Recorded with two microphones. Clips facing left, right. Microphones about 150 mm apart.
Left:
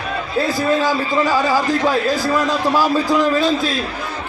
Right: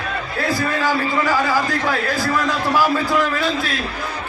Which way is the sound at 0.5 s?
20° left (ahead or behind).